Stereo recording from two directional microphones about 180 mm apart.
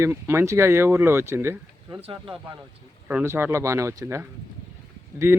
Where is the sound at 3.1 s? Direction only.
10° right (ahead or behind).